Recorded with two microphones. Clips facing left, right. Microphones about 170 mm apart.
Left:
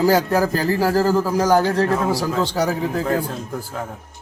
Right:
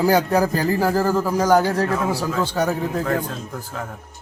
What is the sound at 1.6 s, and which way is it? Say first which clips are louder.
Speech: left 2 dB; 10° right (ahead or behind).